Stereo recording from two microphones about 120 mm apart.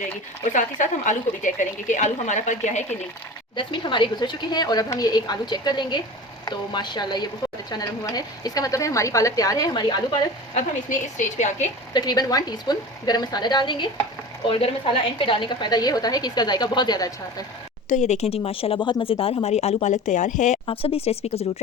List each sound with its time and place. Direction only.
0.4 s a woman's voice: 90° left
3.5 s a woman's voice: 40° left (ahead or behind)
10.5 s speech: 85° left
11.9 s a woman's voice: 35° left (ahead or behind)
17.8 s speech: 80° left
20.7 s speech: 55° left (ahead or behind)